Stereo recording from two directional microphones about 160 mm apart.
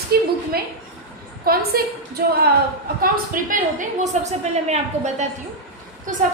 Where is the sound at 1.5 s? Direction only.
70° right (ahead or behind).